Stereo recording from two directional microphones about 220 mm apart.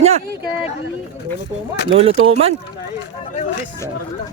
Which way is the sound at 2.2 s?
25° right (ahead or behind).